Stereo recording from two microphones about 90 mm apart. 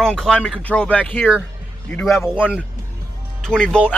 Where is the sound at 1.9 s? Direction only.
Centre (ahead or behind).